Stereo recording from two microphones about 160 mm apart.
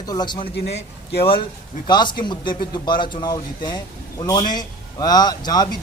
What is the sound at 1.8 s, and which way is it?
A woman's voice, 30° left (ahead or behind).